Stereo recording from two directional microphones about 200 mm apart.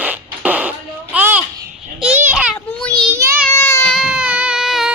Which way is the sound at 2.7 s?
5° left (ahead or behind).